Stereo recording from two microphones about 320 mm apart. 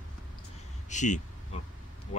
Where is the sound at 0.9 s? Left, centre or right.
Left.